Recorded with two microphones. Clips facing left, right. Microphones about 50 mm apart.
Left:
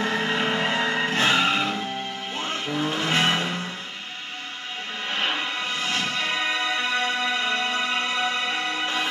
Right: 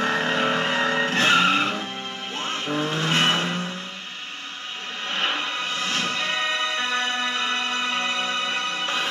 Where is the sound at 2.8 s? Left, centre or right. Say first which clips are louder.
Even; left.